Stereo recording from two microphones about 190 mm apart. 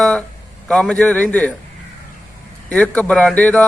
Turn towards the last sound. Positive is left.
turn(degrees=5)  # may be behind; listen again after turning